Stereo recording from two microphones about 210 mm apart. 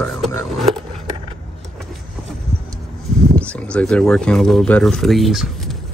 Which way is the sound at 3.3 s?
5° left (ahead or behind).